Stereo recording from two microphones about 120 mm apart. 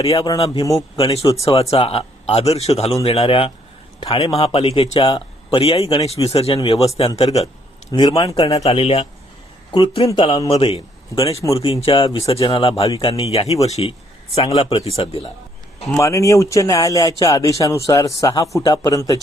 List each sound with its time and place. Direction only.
0.0 s speech: 55° left (ahead or behind)
0.3 s speech: 30° left (ahead or behind)
0.9 s speech: 50° left (ahead or behind)
8.2 s speech: 30° left (ahead or behind)
8.4 s a man's voice: 60° left (ahead or behind)
16.0 s speech: 25° left (ahead or behind)